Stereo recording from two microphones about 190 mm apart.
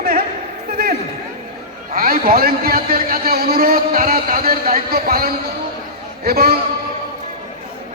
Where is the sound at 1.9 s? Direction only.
50° right (ahead or behind).